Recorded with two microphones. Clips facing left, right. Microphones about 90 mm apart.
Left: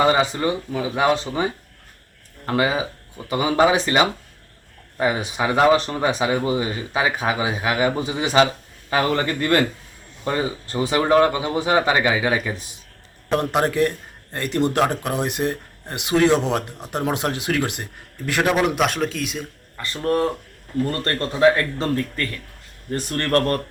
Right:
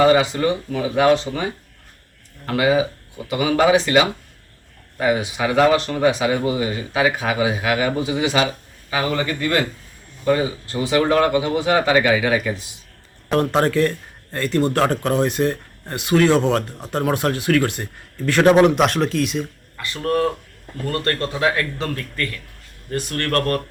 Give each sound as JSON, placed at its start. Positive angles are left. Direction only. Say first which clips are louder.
{"t": 0.0, "sound": "speech", "louder": "right 3 dB", "side_deg": 25}
{"t": 2.5, "sound": "a man's voice", "louder": "right 3 dB", "side_deg": 30}
{"t": 10.2, "sound": "speech", "louder": "right 4 dB", "side_deg": 30}
{"t": 13.5, "sound": "speech", "louder": "even", "side_deg": 15}
{"t": 18.6, "sound": "speech", "louder": "right 5 dB", "side_deg": 5}
{"t": 19.8, "sound": "speech", "louder": "right 1 dB", "side_deg": 35}